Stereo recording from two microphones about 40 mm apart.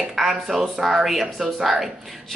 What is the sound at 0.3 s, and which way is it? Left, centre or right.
A woman's voice, centre.